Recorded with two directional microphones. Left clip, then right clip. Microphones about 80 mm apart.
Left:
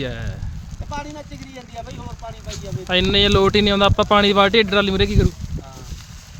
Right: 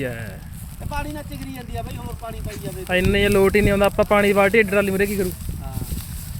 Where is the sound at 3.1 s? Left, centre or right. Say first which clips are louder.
Left 1 dB; left.